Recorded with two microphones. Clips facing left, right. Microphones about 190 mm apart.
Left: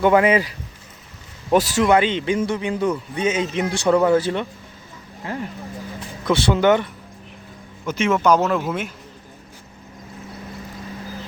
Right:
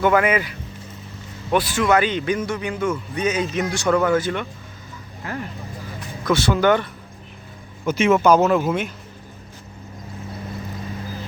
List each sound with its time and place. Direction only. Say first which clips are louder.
0.0 s a man's voice: left 2 dB; 25° left (ahead or behind)
1.8 s a man's voice: left 2 dB; 25° left (ahead or behind)
7.9 s speech: right 2 dB; 10° right (ahead or behind)